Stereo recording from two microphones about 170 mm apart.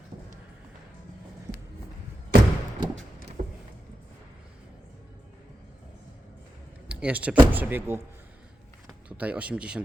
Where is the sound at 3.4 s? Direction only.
45° right (ahead or behind).